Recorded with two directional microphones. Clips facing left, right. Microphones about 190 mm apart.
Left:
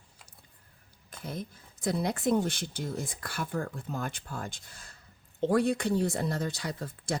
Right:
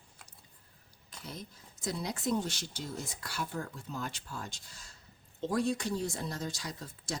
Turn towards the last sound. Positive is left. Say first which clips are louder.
# left 6 dB
turn(degrees=55)  # may be behind; listen again after turning